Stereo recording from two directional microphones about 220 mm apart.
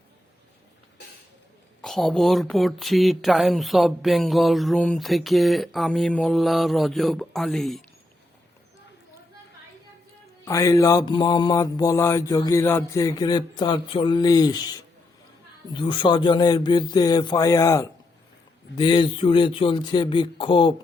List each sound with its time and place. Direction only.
1.8 s speech: centre (ahead or behind)
10.4 s mantra: 15° left (ahead or behind)
15.7 s speech: 20° left (ahead or behind)